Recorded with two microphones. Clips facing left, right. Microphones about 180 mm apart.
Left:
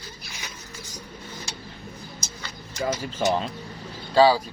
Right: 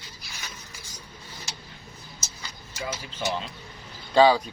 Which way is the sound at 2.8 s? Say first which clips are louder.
Left 7 dB; 45° left (ahead or behind).